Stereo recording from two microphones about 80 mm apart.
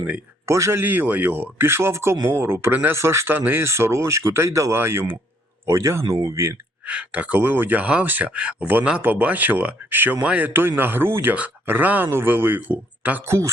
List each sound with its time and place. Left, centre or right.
0.4 s speech: right
3.3 s speech: right
6.8 s speech: centre
10.5 s speech: right